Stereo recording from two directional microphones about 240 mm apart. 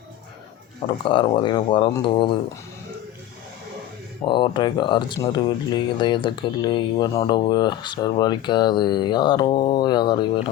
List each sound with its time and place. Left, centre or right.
1.0 s speech: left
4.3 s speech: centre